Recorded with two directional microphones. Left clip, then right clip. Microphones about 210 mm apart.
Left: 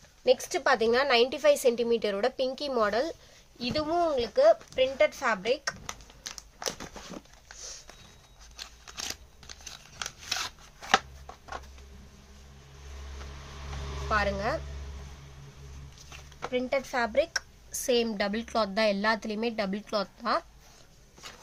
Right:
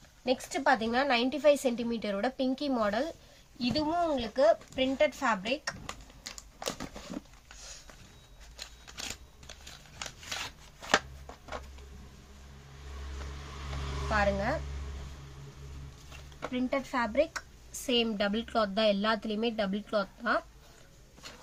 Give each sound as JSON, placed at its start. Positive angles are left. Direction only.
{"t": 0.3, "sound": "a woman's voice", "side_deg": 55}
{"t": 5.8, "sound": "crumpling", "side_deg": 15}
{"t": 10.8, "sound": "shuffling cards", "side_deg": 15}
{"t": 14.1, "sound": "a woman's voice", "side_deg": 55}
{"t": 16.5, "sound": "a woman's voice", "side_deg": 55}